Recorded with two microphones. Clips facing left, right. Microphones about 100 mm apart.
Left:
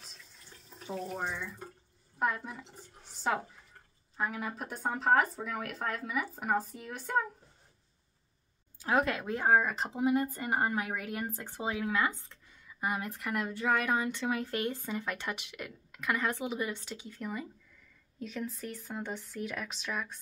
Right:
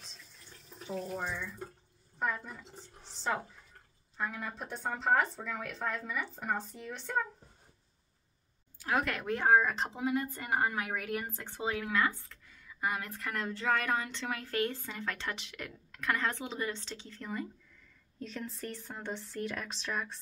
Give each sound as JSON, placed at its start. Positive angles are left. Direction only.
{"t": 2.2, "sound": "speech", "side_deg": 10}
{"t": 8.8, "sound": "a woman's voice", "side_deg": 25}
{"t": 9.4, "sound": "speech", "side_deg": 5}
{"t": 9.9, "sound": "a woman's voice", "side_deg": 15}